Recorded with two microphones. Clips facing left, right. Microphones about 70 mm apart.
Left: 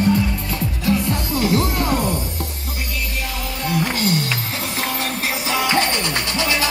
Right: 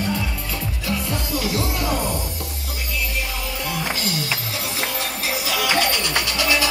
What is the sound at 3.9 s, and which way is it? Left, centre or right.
Music, left.